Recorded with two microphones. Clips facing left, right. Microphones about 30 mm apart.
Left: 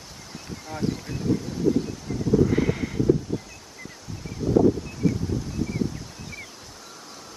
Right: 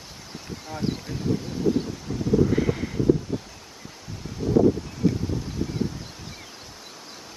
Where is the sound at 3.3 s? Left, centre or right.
Centre.